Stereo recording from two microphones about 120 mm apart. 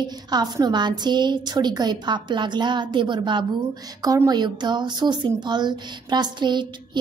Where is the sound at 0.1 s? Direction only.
35° right (ahead or behind).